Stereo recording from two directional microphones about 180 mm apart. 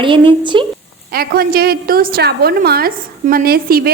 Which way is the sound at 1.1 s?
55° right (ahead or behind).